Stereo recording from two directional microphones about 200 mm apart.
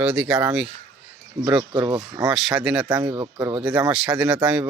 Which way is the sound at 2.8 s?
15° right (ahead or behind).